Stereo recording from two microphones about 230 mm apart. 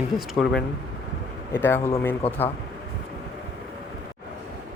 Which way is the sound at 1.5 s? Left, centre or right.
Centre.